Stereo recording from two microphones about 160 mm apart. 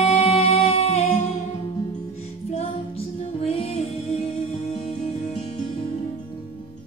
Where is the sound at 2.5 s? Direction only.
40° left (ahead or behind).